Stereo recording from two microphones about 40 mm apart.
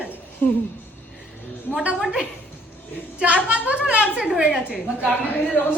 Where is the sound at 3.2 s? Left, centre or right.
Right; by 5.1 s centre.